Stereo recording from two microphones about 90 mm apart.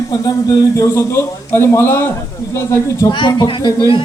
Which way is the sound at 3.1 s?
55° left (ahead or behind).